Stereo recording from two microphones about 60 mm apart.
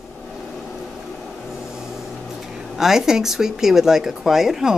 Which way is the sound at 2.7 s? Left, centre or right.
Centre.